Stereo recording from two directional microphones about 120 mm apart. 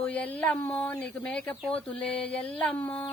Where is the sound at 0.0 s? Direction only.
10° left (ahead or behind).